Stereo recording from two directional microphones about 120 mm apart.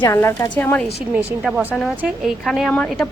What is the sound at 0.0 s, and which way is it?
Speech, 20° left (ahead or behind).